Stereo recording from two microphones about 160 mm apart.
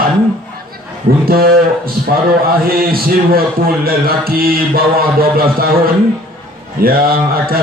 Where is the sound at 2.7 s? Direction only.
65° right (ahead or behind).